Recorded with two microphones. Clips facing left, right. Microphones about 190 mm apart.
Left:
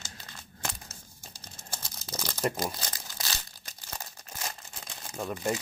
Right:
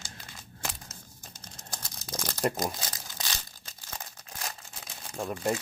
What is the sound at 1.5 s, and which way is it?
Crumpling, 5° left (ahead or behind).